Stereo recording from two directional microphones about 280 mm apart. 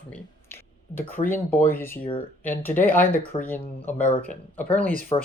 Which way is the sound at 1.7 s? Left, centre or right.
Centre.